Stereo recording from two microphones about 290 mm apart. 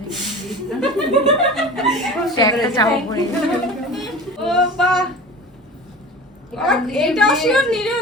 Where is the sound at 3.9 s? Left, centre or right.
Centre.